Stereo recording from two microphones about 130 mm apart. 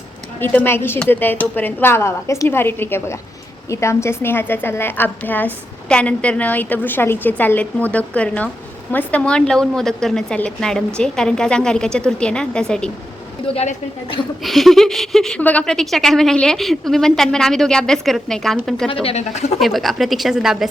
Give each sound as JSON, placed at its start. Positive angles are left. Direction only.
{"t": 0.3, "sound": "a woman's voice", "side_deg": 15}
{"t": 13.5, "sound": "a woman's voice", "side_deg": 50}
{"t": 14.4, "sound": "speech", "side_deg": 0}
{"t": 19.0, "sound": "speech", "side_deg": 55}
{"t": 19.5, "sound": "speech", "side_deg": 0}